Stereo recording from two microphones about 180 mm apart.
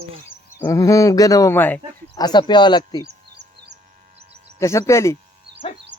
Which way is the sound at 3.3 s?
65° right (ahead or behind).